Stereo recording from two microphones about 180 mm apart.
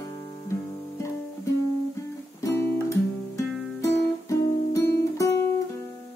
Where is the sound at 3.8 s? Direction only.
15° left (ahead or behind).